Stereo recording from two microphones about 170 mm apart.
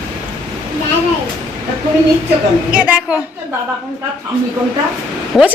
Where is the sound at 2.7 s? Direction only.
5° right (ahead or behind).